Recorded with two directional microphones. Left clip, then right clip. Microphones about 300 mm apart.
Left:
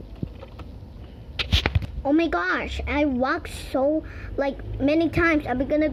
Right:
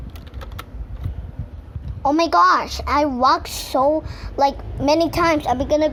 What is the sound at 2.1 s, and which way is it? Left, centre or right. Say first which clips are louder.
A woman's voice: right 8 dB; right.